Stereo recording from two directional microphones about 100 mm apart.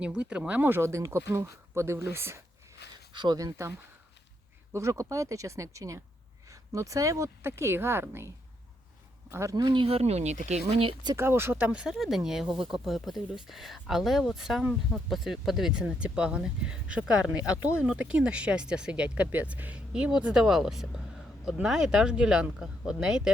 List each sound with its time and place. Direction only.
0.0 s speech: 10° right (ahead or behind); by 2.4 s 25° right (ahead or behind)
3.1 s speech: 45° right (ahead or behind)
4.7 s speech: 30° right (ahead or behind)
9.3 s speech: 30° right (ahead or behind)
9.6 s speech: 60° right (ahead or behind)
11.2 s speech: 25° right (ahead or behind); by 23.3 s 5° right (ahead or behind)